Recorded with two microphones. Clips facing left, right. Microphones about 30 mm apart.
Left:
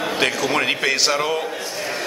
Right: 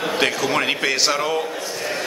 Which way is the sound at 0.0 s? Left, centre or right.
Centre.